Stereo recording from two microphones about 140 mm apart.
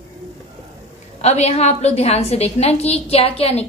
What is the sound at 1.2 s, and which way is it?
A woman's voice, 50° left (ahead or behind).